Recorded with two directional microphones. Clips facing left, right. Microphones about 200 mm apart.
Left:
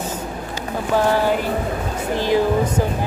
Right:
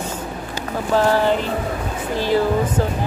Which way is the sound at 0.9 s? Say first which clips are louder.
Right 1 dB; 15° left (ahead or behind).